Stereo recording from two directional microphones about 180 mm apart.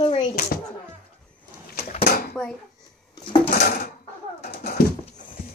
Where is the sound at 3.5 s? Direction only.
55° left (ahead or behind).